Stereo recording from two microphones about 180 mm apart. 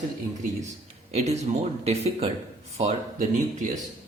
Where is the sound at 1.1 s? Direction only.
35° right (ahead or behind).